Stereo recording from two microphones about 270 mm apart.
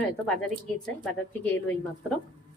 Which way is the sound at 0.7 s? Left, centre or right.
Centre.